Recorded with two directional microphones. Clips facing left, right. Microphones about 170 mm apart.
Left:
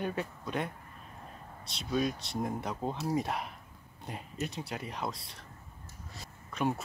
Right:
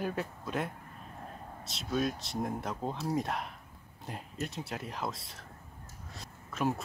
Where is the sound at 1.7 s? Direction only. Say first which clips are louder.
Left 1 dB; centre (ahead or behind).